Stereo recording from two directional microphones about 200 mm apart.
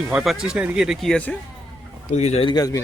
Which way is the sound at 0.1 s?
5° right (ahead or behind).